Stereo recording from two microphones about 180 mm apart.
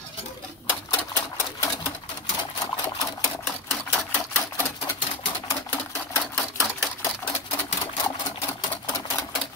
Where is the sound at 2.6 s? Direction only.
15° left (ahead or behind).